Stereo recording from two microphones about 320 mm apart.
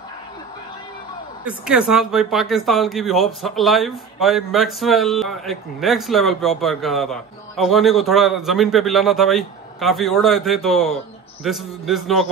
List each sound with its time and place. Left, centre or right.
1.4 s a man's voice: centre